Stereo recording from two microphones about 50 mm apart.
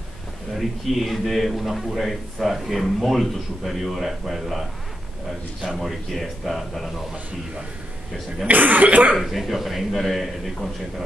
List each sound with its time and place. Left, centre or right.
0.6 s a man's voice: centre
8.5 s speech: right
9.1 s a man's voice: centre